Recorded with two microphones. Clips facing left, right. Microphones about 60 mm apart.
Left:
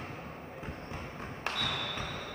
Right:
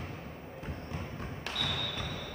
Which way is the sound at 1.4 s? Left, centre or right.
Left.